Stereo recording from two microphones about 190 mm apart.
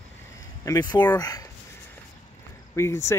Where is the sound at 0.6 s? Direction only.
20° left (ahead or behind).